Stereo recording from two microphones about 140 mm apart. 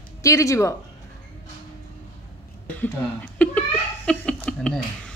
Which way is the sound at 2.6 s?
10° left (ahead or behind).